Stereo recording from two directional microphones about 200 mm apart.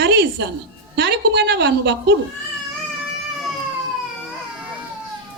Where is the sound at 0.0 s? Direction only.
60° right (ahead or behind).